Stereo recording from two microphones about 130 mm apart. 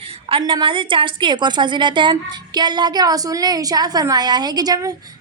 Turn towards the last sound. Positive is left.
turn(degrees=-30)  # may be behind; listen again after turning